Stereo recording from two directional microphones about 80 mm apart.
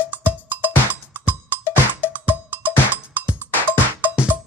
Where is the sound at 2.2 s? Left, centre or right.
Centre.